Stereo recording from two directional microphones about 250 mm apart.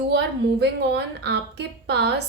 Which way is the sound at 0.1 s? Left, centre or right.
Right.